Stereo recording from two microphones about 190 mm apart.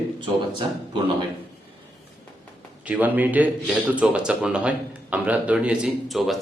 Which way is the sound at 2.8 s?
10° right (ahead or behind).